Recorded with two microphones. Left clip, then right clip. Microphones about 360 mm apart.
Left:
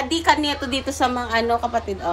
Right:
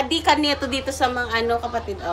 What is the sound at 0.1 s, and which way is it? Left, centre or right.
Speech, centre.